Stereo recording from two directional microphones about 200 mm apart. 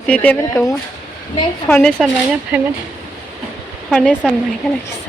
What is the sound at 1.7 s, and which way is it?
Speech, 5° left (ahead or behind).